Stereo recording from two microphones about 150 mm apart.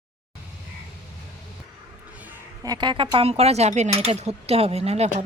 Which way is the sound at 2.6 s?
25° right (ahead or behind).